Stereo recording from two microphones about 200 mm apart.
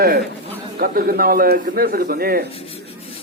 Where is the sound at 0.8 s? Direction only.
50° right (ahead or behind).